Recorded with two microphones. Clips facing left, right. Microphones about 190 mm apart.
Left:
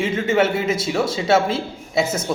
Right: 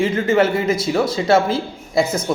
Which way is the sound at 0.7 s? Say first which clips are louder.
Right 3 dB; 25° left (ahead or behind).